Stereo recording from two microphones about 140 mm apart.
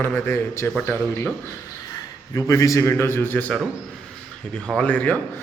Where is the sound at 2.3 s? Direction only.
20° left (ahead or behind).